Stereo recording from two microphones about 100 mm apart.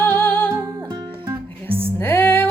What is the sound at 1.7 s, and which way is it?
Music, 70° right (ahead or behind).